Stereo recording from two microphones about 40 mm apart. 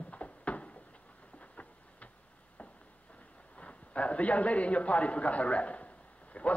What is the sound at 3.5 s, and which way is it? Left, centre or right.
A man's voice, left.